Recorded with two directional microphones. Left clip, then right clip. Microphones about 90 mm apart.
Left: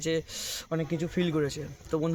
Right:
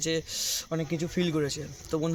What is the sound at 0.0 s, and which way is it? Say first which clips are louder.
Speech: right 1 dB; 5° left (ahead or behind).